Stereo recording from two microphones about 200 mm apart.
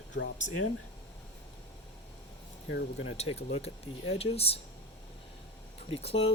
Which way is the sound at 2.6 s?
70° left (ahead or behind).